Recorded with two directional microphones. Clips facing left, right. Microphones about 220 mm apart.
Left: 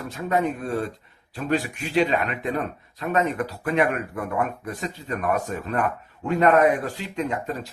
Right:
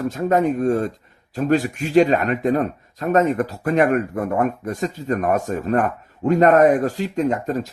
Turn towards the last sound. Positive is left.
turn(degrees=-45)  # may be behind; listen again after turning